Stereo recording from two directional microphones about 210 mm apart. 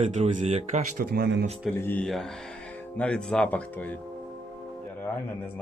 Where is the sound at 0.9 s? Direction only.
50° right (ahead or behind).